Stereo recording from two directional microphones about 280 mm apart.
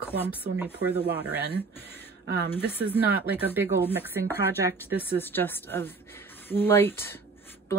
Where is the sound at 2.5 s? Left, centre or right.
Centre.